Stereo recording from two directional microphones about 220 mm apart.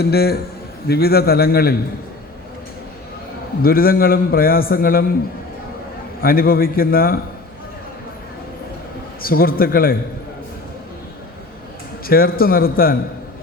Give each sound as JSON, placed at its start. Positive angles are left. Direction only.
{"t": 0.0, "sound": "a man's voice", "side_deg": 45}
{"t": 3.6, "sound": "a man's voice", "side_deg": 40}
{"t": 6.2, "sound": "a man's voice", "side_deg": 40}
{"t": 9.2, "sound": "a man's voice", "side_deg": 40}
{"t": 12.0, "sound": "a man's voice", "side_deg": 40}